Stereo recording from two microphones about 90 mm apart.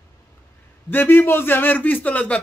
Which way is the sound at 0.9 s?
20° left (ahead or behind).